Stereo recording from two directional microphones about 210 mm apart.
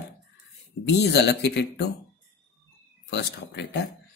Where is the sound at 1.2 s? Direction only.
55° left (ahead or behind).